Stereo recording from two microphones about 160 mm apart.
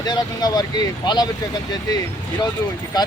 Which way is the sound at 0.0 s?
25° left (ahead or behind).